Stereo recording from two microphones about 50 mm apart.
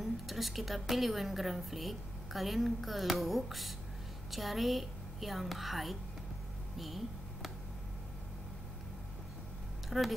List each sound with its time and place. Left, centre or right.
0.0 s a woman's voice: centre
9.8 s speech: centre